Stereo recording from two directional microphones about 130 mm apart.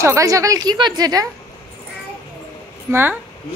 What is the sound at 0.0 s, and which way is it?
A woman's voice, 25° right (ahead or behind).